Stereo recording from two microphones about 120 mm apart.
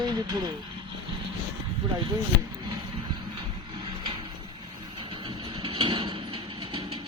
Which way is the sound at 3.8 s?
45° right (ahead or behind).